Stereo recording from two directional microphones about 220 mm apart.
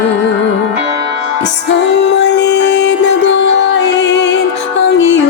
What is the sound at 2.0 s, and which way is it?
Music, 50° left (ahead or behind).